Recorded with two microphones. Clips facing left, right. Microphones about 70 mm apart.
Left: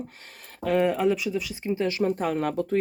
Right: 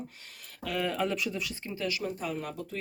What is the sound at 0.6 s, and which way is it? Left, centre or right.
Speech, left.